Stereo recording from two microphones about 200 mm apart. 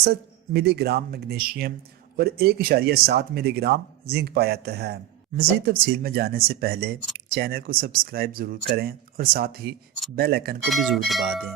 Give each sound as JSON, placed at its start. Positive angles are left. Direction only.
{"t": 0.0, "sound": "speech", "side_deg": -50}
{"t": 10.7, "sound": "speech", "side_deg": 0}